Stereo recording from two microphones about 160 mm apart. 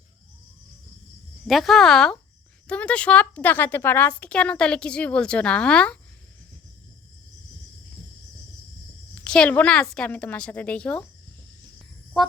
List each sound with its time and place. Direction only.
1.5 s a woman's voice: centre (ahead or behind)
9.2 s a woman's voice: 5° left (ahead or behind)